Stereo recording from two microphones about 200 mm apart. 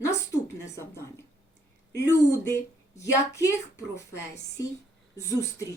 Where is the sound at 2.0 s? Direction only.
15° left (ahead or behind).